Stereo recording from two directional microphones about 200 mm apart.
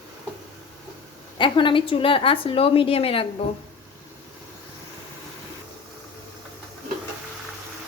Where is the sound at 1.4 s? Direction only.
25° left (ahead or behind).